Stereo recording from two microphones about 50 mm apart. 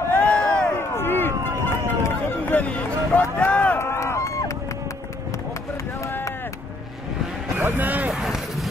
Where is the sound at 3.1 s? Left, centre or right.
Left.